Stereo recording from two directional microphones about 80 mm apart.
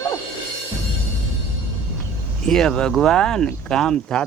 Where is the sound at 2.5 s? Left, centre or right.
Centre.